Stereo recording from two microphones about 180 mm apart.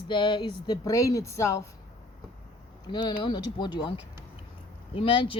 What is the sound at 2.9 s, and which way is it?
A woman's voice, 25° left (ahead or behind).